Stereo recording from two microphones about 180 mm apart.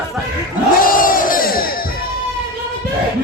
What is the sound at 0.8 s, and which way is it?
Crowd, 50° left (ahead or behind).